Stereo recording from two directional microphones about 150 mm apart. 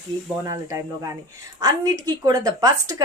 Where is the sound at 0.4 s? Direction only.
20° right (ahead or behind).